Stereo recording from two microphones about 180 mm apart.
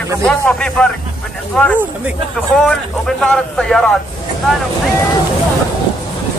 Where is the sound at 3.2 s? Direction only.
5° left (ahead or behind).